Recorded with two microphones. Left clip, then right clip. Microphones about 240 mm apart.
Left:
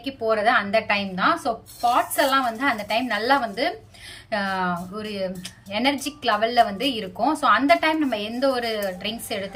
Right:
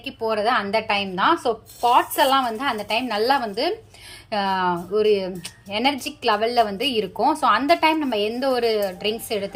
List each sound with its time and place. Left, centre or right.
0.0 s a woman's voice: right